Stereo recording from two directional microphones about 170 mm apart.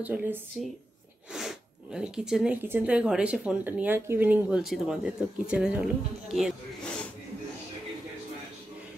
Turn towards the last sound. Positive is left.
turn(degrees=5)  # may be behind; listen again after turning